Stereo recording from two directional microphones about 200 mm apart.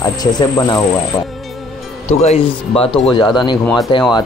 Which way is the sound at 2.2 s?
30° left (ahead or behind).